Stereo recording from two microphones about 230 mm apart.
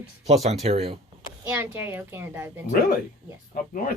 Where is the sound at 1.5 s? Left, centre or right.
Centre.